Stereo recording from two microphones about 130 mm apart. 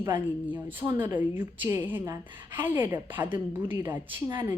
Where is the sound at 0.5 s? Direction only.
15° right (ahead or behind).